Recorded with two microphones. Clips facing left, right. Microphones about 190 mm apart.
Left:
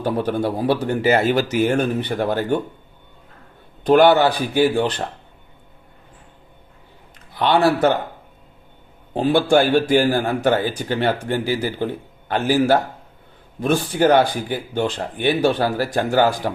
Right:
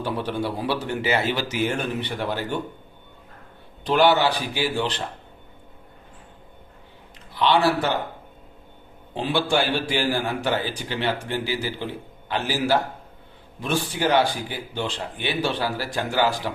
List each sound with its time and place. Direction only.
0.0 s a man's voice: 45° left (ahead or behind)
3.8 s a man's voice: 50° left (ahead or behind)
7.3 s a man's voice: 50° left (ahead or behind)
9.1 s a man's voice: 45° left (ahead or behind)